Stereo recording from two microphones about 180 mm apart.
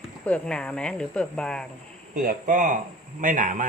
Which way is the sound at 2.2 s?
45° right (ahead or behind).